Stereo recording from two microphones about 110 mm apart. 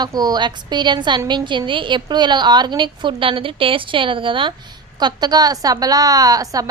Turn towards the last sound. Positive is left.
turn(degrees=-35)  # may be behind; listen again after turning